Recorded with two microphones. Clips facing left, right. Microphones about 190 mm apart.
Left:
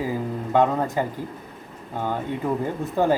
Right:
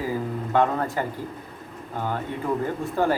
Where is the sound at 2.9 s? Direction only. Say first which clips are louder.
Left 3 dB; 15° left (ahead or behind).